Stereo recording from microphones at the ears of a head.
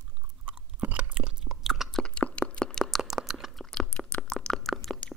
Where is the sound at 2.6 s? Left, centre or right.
Centre.